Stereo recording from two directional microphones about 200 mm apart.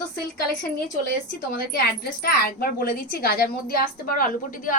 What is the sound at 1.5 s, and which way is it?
A woman's voice, 50° left (ahead or behind).